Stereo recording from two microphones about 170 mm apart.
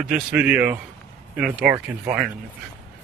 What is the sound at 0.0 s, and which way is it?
Speech, 5° right (ahead or behind).